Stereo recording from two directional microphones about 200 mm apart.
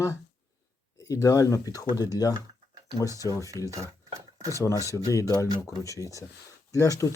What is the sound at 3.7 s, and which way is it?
Cutlery, 15° right (ahead or behind).